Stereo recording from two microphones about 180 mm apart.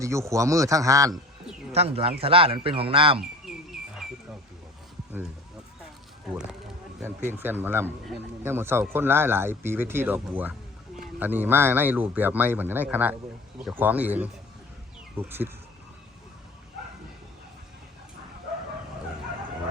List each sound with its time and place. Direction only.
0.0 s speech: 15° right (ahead or behind)
1.7 s speech: 35° right (ahead or behind)
3.7 s bird: centre (ahead or behind)
6.3 s speech: 5° right (ahead or behind)